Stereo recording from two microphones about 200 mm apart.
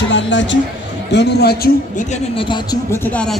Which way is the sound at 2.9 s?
5° left (ahead or behind).